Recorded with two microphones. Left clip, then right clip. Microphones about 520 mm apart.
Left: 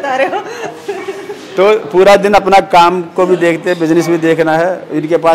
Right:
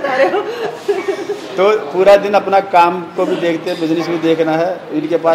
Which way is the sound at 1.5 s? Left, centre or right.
Left.